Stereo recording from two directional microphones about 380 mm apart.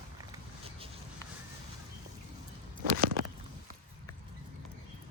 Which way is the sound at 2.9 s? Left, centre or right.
Right.